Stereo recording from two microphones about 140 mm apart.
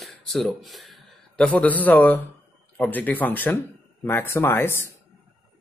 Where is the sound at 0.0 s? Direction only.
Centre (ahead or behind).